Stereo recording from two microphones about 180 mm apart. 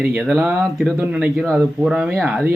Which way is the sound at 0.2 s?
5° right (ahead or behind).